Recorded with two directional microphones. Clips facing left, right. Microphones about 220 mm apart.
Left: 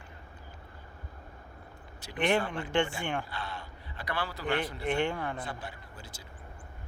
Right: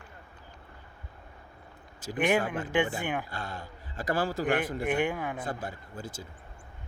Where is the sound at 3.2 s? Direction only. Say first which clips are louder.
Right 1 dB; 45° right (ahead or behind).